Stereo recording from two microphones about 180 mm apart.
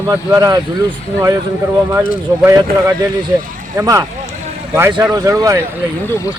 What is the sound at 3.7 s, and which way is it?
Speech, 15° right (ahead or behind).